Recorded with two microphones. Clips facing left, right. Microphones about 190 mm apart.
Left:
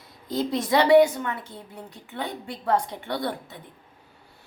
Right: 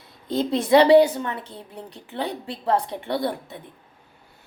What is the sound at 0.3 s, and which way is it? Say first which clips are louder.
A woman's voice: right 5 dB; 25° right (ahead or behind).